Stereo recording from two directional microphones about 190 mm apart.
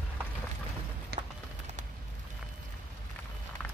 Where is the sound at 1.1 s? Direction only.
55° right (ahead or behind).